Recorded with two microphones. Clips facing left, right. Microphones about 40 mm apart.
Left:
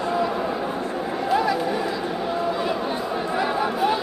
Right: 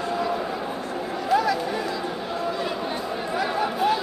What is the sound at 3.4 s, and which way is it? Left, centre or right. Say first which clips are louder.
Chatter: left 1 dB; centre.